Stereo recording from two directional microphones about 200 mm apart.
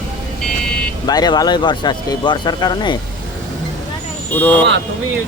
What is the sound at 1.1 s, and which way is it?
Speech, 20° left (ahead or behind).